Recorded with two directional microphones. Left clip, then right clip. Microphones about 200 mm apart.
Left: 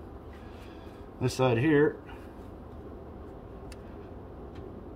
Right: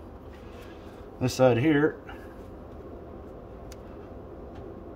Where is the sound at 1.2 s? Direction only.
50° right (ahead or behind).